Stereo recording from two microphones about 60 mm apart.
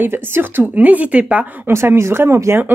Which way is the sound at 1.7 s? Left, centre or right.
Right.